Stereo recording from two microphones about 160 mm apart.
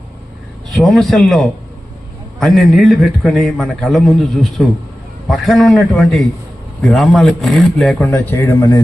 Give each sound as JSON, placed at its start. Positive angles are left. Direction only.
{"t": 0.7, "sound": "a man's voice", "side_deg": 0}
{"t": 8.1, "sound": "speech", "side_deg": 15}